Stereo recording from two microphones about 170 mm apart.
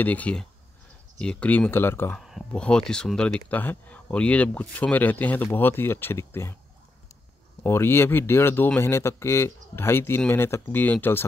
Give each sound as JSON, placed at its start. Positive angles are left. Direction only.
{"t": 0.0, "sound": "speech", "side_deg": 10}
{"t": 2.1, "sound": "speech", "side_deg": 0}
{"t": 7.6, "sound": "speech", "side_deg": 15}